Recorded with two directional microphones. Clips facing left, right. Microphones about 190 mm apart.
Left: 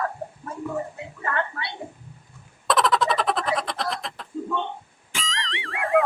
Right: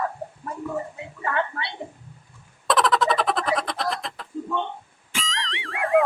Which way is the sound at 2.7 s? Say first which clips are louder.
Right 1 dB; centre (ahead or behind).